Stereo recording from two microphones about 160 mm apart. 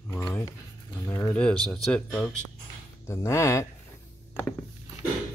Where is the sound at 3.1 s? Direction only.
15° left (ahead or behind).